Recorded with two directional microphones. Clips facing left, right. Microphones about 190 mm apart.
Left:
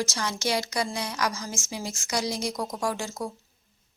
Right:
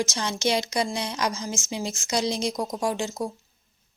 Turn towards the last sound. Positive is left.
turn(degrees=-20)  # may be behind; listen again after turning